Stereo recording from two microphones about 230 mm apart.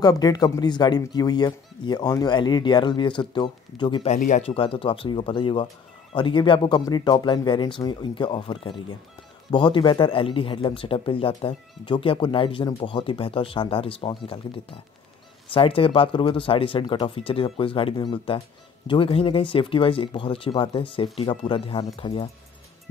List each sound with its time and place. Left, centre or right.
0.0 s speech: centre